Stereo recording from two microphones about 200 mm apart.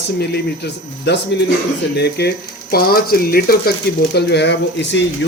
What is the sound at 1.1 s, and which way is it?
Speech, 60° left (ahead or behind).